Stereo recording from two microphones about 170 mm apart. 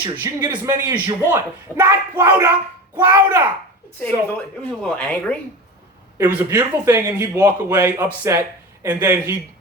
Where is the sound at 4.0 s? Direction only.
10° left (ahead or behind).